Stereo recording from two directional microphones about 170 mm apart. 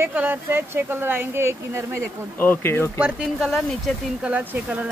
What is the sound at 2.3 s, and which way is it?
Speech, 10° left (ahead or behind).